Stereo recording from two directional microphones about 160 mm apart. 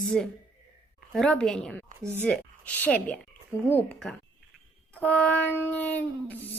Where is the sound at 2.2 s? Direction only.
10° left (ahead or behind).